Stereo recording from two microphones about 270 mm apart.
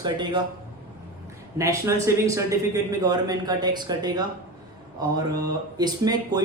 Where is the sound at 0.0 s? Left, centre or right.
Centre.